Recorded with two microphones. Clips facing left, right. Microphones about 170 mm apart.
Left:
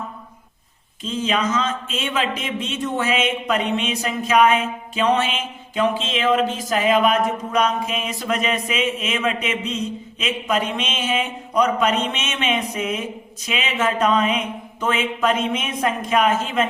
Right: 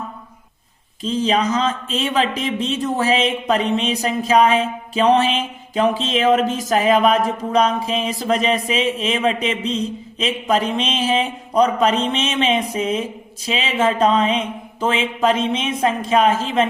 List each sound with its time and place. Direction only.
1.0 s a man's voice: 35° right (ahead or behind)
12.7 s mantra: 30° right (ahead or behind)